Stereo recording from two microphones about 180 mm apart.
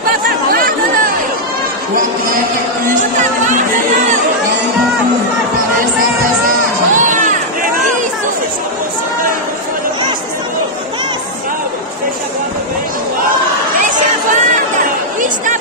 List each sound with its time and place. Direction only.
0.6 s chatter: 50° right (ahead or behind)
3.0 s music: 45° right (ahead or behind)
6.9 s music: 45° right (ahead or behind)
13.8 s run: 45° right (ahead or behind)